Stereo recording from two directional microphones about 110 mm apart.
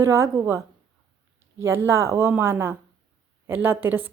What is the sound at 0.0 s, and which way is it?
A woman's voice, 25° right (ahead or behind).